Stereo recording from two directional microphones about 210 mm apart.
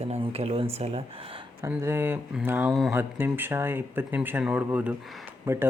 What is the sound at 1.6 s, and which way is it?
Speech, 10° right (ahead or behind).